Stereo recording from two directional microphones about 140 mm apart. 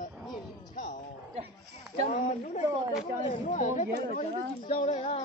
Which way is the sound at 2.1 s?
55° left (ahead or behind).